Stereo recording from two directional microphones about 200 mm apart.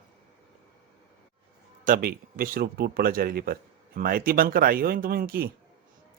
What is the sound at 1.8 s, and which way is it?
Speech, 45° right (ahead or behind).